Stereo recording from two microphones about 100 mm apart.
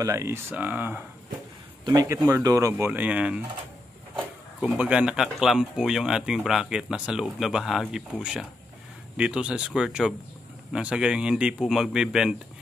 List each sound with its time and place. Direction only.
0.0 s speech: 30° right (ahead or behind)
2.0 s speech: 30° right (ahead or behind)
2.9 s speech: 15° right (ahead or behind)
4.6 s speech: 10° right (ahead or behind)